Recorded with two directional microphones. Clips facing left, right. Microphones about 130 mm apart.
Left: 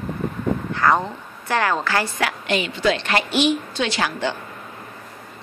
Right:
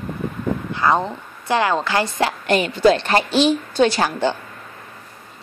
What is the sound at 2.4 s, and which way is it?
A woman's voice, 45° right (ahead or behind).